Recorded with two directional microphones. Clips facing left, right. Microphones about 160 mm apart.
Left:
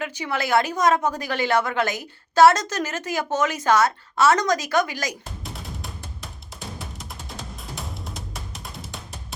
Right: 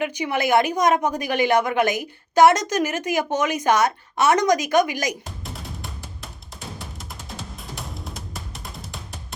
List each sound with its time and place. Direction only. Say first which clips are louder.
0.0 s a woman's voice: right 4 dB; 15° right (ahead or behind)
5.2 s music: right 1 dB; centre (ahead or behind)